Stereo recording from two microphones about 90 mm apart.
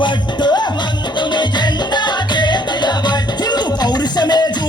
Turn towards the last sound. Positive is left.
turn(degrees=50)  # may be behind; listen again after turning